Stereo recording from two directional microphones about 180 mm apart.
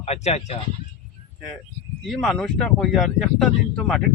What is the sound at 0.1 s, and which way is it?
Speech, 35° left (ahead or behind).